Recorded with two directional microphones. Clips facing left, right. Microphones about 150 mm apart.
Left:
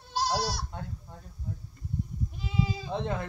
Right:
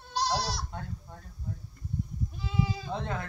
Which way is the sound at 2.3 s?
20° left (ahead or behind).